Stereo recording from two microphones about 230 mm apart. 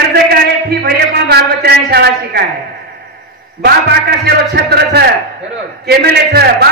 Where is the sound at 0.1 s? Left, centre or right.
Right.